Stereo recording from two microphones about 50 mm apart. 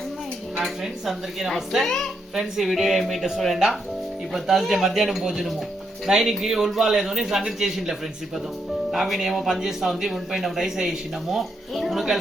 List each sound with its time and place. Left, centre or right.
0.5 s a man's voice: centre